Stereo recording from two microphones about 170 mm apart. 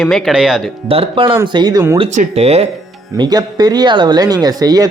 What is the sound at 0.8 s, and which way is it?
Speech, 35° right (ahead or behind).